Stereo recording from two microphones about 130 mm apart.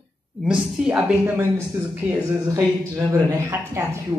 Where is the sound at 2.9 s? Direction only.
20° right (ahead or behind).